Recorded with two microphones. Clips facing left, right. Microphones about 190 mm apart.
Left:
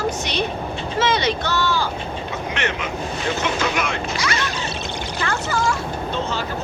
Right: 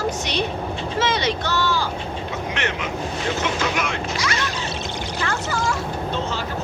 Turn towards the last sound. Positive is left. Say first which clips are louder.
# left 2 dB
turn(degrees=65)  # may be behind; listen again after turning